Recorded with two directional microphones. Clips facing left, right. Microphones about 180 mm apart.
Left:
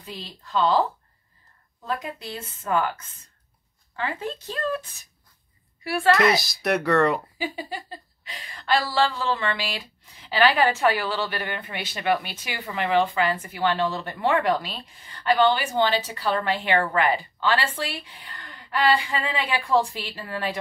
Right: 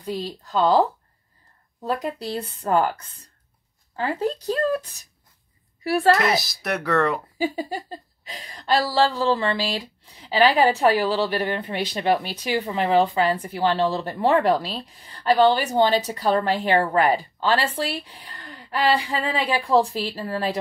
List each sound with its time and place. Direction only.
0.0 s speech: 40° right (ahead or behind)
6.1 s speech: centre (ahead or behind)
7.3 s speech: 40° right (ahead or behind)